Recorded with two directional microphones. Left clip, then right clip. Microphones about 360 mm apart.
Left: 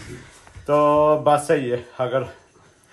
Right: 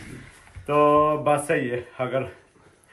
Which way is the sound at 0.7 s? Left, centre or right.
Centre.